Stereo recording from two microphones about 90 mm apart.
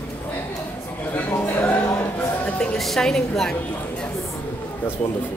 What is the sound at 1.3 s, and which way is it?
Speech, 20° left (ahead or behind).